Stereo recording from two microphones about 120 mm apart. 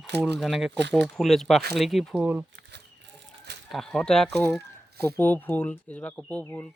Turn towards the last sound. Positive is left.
turn(degrees=15)  # may be behind; listen again after turning